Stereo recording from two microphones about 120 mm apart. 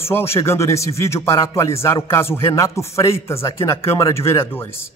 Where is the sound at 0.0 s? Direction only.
20° left (ahead or behind).